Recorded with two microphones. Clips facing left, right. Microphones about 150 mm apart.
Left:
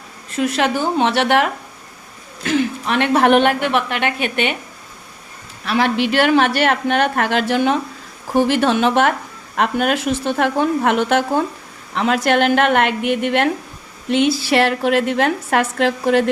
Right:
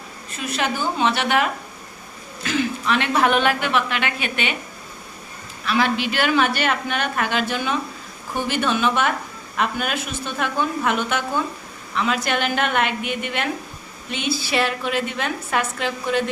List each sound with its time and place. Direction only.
0.3 s speech: 75° left (ahead or behind)
2.4 s a woman's voice: 60° left (ahead or behind)
5.8 s speech: 70° left (ahead or behind)
8.4 s a woman's voice: 85° left
11.9 s a woman's voice: 75° left (ahead or behind)